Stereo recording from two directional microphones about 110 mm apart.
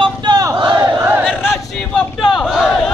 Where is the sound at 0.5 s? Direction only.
45° right (ahead or behind).